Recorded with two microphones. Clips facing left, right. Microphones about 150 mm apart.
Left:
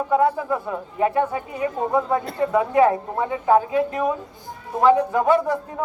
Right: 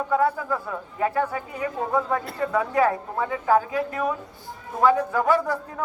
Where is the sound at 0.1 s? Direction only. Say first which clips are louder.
Left 3 dB; 25° left (ahead or behind).